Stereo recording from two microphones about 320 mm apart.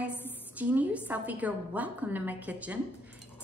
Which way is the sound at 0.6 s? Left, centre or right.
Centre.